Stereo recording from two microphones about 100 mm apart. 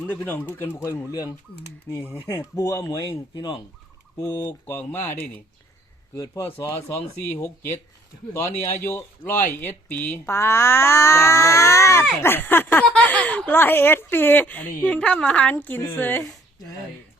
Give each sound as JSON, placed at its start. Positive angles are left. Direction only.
{"t": 0.1, "sound": "speech", "side_deg": 20}
{"t": 2.1, "sound": "speech", "side_deg": 35}
{"t": 3.1, "sound": "speech", "side_deg": 50}
{"t": 4.2, "sound": "speech", "side_deg": 30}
{"t": 4.6, "sound": "speech", "side_deg": 20}
{"t": 6.1, "sound": "speech", "side_deg": 35}
{"t": 6.4, "sound": "speech", "side_deg": 25}